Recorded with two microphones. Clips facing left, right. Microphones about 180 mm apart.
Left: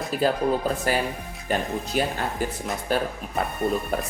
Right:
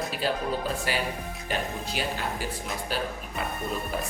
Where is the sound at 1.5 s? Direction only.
50° left (ahead or behind).